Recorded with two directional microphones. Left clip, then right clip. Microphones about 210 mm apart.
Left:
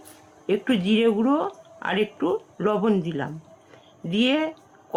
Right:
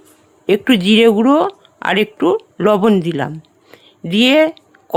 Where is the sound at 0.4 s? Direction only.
50° right (ahead or behind).